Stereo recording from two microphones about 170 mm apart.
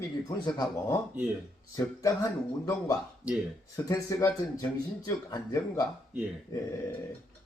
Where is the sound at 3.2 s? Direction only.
10° right (ahead or behind).